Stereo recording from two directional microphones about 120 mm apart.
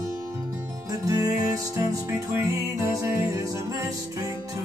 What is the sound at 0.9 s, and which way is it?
Music, 30° right (ahead or behind).